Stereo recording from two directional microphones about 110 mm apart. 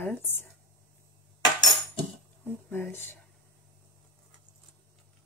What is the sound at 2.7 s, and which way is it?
Speech, 20° left (ahead or behind).